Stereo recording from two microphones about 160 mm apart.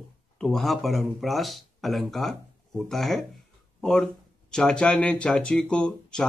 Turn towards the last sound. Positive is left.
turn(degrees=5)  # may be behind; listen again after turning